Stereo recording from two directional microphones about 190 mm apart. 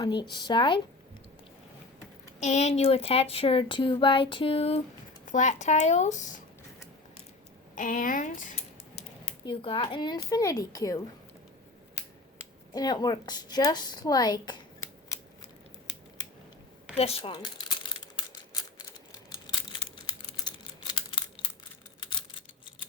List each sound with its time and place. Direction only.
0.0 s speech: 25° left (ahead or behind)
2.4 s speech: 35° left (ahead or behind)
7.8 s speech: 45° left (ahead or behind)
9.0 s speech: 30° left (ahead or behind)
12.7 s speech: 20° left (ahead or behind)
17.0 s speech: 30° left (ahead or behind)
19.3 s computer keyboard: 20° left (ahead or behind)